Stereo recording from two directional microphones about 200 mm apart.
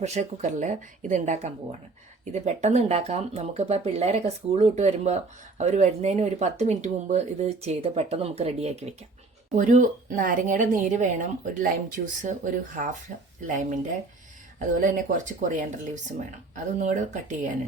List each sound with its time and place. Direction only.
0.0 s speech: 35° right (ahead or behind)